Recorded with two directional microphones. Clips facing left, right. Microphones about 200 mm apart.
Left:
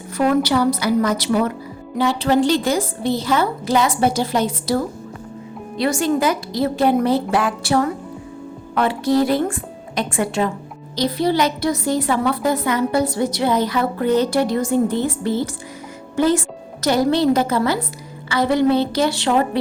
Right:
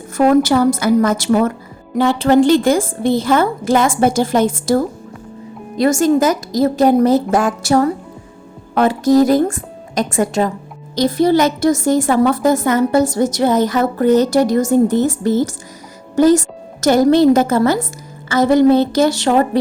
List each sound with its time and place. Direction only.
0.2 s a woman's voice: 45° right (ahead or behind)